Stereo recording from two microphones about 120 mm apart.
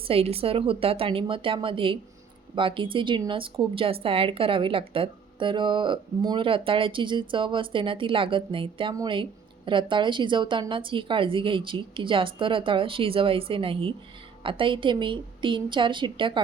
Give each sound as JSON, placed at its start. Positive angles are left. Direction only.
{"t": 0.1, "sound": "a woman's voice", "side_deg": -55}